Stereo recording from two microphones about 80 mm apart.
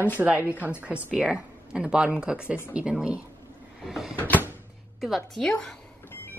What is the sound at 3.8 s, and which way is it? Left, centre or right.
Cupboard open or close, centre.